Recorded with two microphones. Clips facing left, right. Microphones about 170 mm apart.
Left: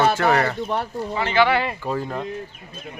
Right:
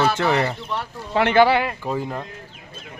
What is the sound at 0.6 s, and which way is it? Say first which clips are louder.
Speech: left 4 dB; 50° left (ahead or behind).